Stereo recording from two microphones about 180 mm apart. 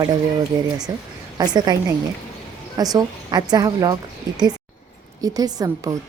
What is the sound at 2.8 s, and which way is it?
Speech, 20° right (ahead or behind).